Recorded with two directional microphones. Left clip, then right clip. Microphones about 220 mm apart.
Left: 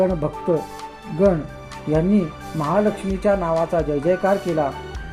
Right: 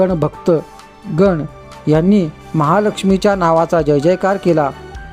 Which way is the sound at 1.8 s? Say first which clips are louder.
Right 7 dB; 50° right (ahead or behind).